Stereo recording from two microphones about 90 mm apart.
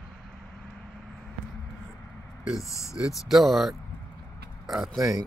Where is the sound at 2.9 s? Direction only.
5° right (ahead or behind).